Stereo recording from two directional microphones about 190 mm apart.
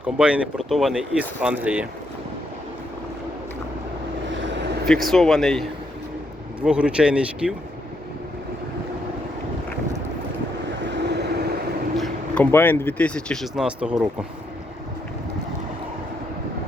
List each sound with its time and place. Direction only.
0.0 s speech: 5° right (ahead or behind)
4.4 s vehicle: 70° right (ahead or behind)
4.9 s speech: centre (ahead or behind)
10.8 s vehicle: 65° right (ahead or behind)
11.9 s speech: 5° left (ahead or behind)